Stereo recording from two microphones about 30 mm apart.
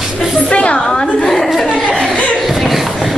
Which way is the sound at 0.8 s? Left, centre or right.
Left.